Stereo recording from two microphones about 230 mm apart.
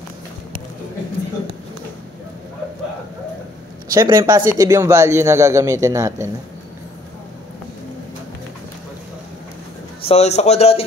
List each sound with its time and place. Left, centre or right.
3.9 s speech: centre
10.0 s a man's voice: left